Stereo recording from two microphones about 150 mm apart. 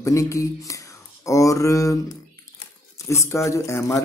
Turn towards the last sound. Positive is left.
turn(degrees=20)  # may be behind; listen again after turning